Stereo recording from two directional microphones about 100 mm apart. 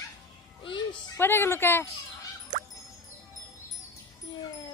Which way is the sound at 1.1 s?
25° left (ahead or behind).